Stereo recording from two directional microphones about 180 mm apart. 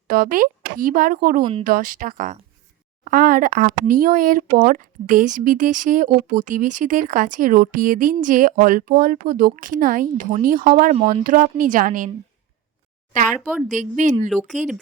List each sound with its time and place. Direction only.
0.1 s speech: 50° right (ahead or behind)
1.4 s speech: 25° right (ahead or behind)
1.6 s speech: 50° right (ahead or behind)
13.7 s speech: 45° right (ahead or behind)
14.3 s speech: centre (ahead or behind)